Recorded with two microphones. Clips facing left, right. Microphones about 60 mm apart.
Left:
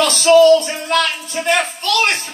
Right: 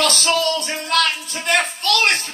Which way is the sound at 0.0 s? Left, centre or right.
Centre.